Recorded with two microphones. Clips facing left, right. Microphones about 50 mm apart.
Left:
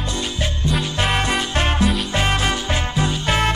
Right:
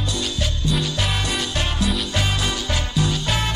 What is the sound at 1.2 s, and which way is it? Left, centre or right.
Music, left.